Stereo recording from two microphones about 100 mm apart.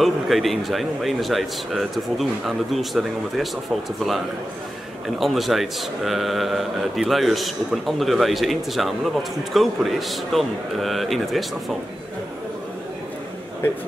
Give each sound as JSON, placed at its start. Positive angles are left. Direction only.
{"t": 0.0, "sound": "a man's voice", "side_deg": 0}
{"t": 5.2, "sound": "a man's voice", "side_deg": 0}